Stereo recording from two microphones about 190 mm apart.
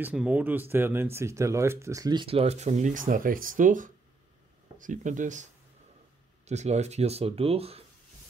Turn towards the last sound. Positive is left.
turn(degrees=-30)  # may be behind; listen again after turning